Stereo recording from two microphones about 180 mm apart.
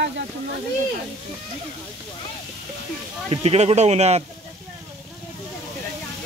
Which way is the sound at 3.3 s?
35° right (ahead or behind).